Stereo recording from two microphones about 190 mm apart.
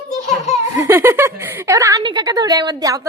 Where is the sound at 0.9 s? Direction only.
10° right (ahead or behind).